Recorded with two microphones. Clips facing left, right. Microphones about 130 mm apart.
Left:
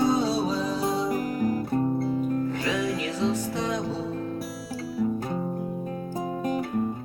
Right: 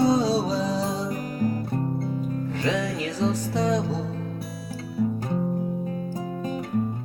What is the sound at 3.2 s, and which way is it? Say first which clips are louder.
Music: right 4 dB; 40° right (ahead or behind).